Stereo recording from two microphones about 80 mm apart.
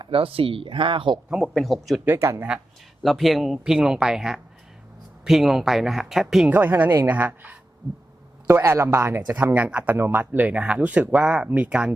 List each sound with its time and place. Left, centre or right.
0.6 s speech: right
1.5 s speech: centre
2.0 s a man's voice: right
3.0 s speech: centre
6.5 s a man's voice: right
9.3 s speech: right